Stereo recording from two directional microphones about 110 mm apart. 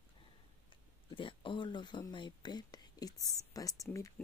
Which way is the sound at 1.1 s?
50° left (ahead or behind).